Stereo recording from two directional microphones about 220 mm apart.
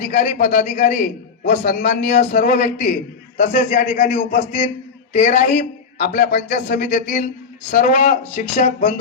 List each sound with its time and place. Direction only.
0.1 s a man's voice: 40° left (ahead or behind)
5.5 s speech: 45° left (ahead or behind)
8.5 s a man's voice: 30° left (ahead or behind)